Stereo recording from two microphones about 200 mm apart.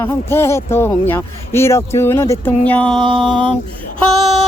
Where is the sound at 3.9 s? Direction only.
Centre (ahead or behind).